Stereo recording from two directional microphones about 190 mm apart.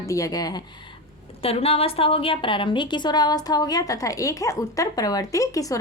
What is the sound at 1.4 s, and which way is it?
A woman's voice, 30° left (ahead or behind).